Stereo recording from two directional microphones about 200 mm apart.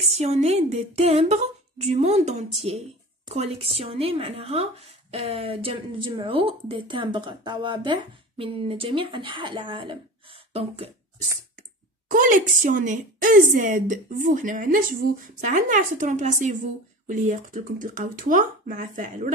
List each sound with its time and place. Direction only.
0.1 s a woman's voice: 30° right (ahead or behind)
12.1 s a woman's voice: 40° right (ahead or behind)